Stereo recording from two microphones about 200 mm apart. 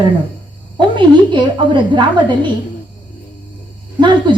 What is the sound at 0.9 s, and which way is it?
A woman's voice, 25° right (ahead or behind).